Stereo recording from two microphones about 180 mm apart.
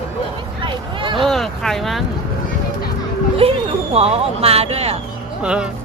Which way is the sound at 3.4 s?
30° right (ahead or behind).